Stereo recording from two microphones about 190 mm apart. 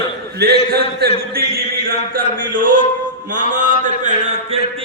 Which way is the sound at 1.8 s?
50° right (ahead or behind).